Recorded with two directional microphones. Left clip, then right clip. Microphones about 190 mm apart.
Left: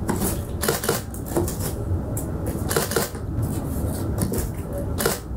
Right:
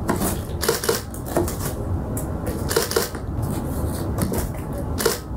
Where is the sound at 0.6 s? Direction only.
15° left (ahead or behind).